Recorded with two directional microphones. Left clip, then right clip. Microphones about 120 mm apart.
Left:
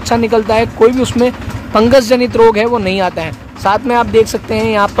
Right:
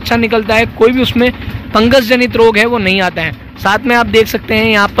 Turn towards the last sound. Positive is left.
turn(degrees=10)  # may be behind; listen again after turning